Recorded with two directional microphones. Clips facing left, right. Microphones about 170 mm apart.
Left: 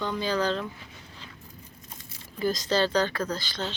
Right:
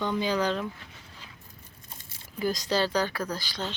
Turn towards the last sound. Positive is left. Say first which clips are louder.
# left 2 dB
turn(degrees=-10)  # may be behind; listen again after turning